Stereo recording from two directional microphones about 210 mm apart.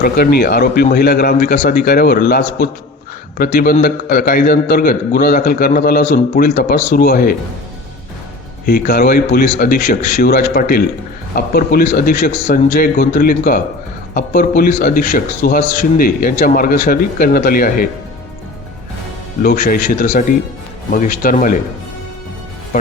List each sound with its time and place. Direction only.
0.0 s a man's voice: 45° left (ahead or behind)
8.6 s a man's voice: 45° left (ahead or behind)
19.4 s speech: 40° left (ahead or behind)